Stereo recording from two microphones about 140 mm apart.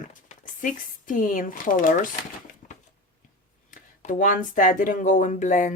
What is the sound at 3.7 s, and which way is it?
Speech, 70° left (ahead or behind).